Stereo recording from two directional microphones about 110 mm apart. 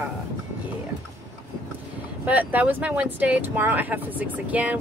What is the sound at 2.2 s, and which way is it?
Speech, 15° right (ahead or behind).